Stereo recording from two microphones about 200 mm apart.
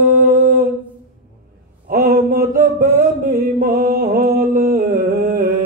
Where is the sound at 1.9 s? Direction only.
45° right (ahead or behind).